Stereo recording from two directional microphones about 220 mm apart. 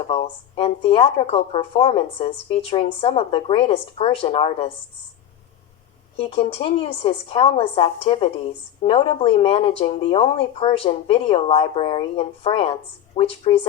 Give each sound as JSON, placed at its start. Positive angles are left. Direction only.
{"t": 0.1, "sound": "speech", "side_deg": 25}
{"t": 6.1, "sound": "speech", "side_deg": 25}